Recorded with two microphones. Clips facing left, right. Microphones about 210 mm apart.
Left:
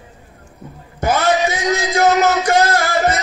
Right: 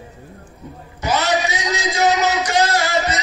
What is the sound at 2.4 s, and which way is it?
Music, 50° left (ahead or behind).